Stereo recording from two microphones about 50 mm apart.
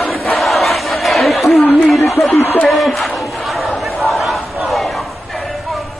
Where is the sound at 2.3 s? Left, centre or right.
Left.